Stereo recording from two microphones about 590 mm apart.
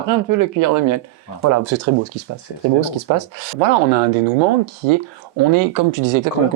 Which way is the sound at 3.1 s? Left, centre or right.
Right.